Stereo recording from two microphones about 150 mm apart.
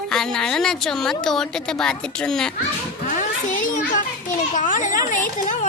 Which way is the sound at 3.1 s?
60° left (ahead or behind).